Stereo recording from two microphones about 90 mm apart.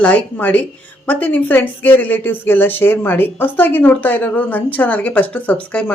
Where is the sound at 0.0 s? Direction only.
15° left (ahead or behind).